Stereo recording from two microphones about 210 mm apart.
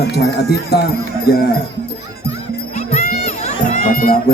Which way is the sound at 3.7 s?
40° left (ahead or behind).